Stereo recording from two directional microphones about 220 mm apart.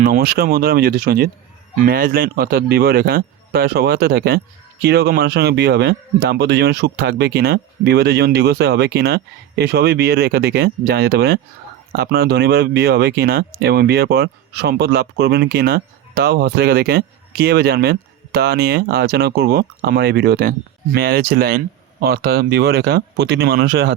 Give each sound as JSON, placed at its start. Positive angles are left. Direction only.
{"t": 0.0, "sound": "speech", "side_deg": -45}